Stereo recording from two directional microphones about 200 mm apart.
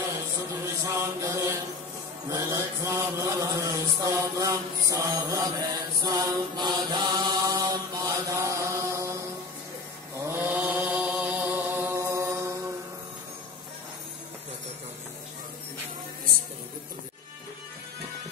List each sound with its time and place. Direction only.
0.8 s chant: 15° right (ahead or behind)
2.2 s mantra: 15° right (ahead or behind)
10.2 s mantra: 10° right (ahead or behind)